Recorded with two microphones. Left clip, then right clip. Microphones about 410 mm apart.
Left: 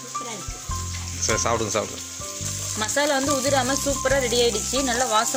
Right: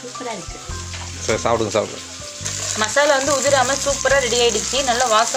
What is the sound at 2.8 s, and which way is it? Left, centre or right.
Speech, right.